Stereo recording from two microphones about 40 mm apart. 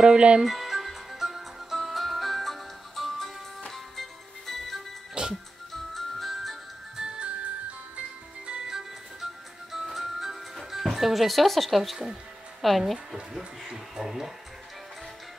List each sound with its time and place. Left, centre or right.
0.0 s speech: right
0.4 s music: centre
7.0 s music: right
8.5 s music: centre
9.2 s music: centre
12.6 s speech: centre
13.4 s speech: centre